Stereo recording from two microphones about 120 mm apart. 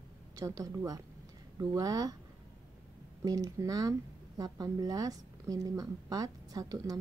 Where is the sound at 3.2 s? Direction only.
30° right (ahead or behind).